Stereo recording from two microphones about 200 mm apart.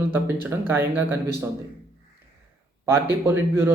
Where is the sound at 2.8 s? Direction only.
10° right (ahead or behind).